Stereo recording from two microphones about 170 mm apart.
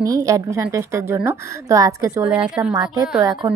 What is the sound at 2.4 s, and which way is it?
Speech, 5° right (ahead or behind).